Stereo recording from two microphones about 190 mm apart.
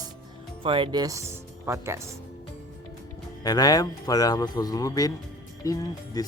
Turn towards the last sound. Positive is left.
turn(degrees=20)  # may be behind; listen again after turning